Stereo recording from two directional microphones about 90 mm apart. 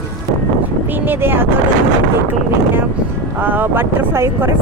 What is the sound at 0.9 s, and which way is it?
Speech, 20° right (ahead or behind).